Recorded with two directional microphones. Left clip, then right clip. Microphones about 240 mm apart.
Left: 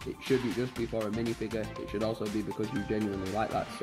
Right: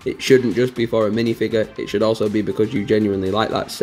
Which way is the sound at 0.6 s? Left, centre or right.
Centre.